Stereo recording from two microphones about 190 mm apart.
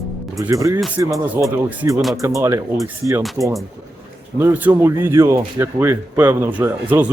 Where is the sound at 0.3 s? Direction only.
15° right (ahead or behind).